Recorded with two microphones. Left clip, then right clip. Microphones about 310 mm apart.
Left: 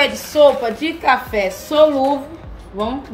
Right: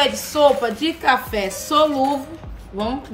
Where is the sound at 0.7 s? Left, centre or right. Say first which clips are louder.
Left 2 dB; right.